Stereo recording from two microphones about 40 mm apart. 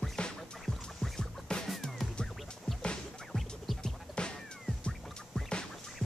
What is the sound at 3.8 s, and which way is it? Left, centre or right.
Music, left.